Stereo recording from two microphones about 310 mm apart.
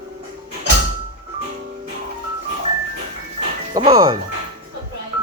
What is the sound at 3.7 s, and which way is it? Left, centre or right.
Speech, centre.